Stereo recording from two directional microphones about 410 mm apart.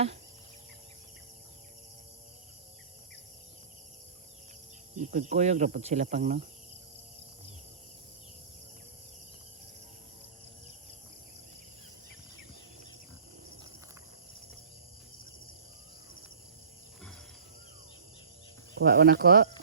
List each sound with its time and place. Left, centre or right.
4.9 s speech: centre
18.8 s speech: right